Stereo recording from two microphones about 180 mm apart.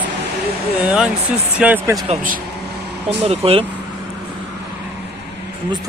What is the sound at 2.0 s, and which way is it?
Speech, 45° right (ahead or behind).